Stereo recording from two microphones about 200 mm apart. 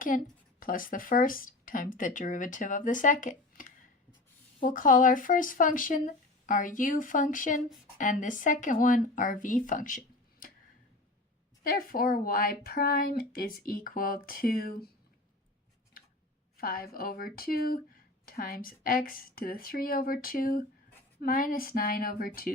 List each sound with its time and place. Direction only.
0.1 s speech: 40° left (ahead or behind)
11.6 s speech: 45° left (ahead or behind)
16.6 s speech: 45° left (ahead or behind)